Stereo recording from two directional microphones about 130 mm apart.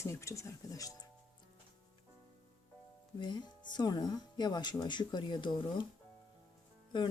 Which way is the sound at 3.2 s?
35° left (ahead or behind).